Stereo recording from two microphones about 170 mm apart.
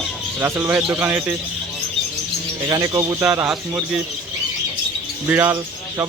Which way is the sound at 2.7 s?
25° right (ahead or behind).